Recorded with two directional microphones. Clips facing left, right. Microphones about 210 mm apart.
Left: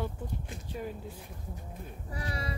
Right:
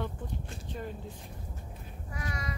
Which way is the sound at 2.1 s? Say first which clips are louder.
Left 1 dB; 30° left (ahead or behind).